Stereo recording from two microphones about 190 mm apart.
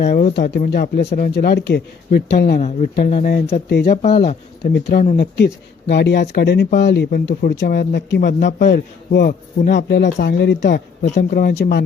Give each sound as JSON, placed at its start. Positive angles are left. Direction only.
{"t": 0.0, "sound": "speech", "side_deg": 40}
{"t": 2.6, "sound": "speech", "side_deg": 40}
{"t": 3.7, "sound": "a man's voice", "side_deg": 60}
{"t": 11.0, "sound": "speech", "side_deg": 45}